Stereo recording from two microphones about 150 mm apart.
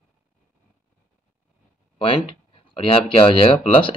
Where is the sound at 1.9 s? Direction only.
35° left (ahead or behind).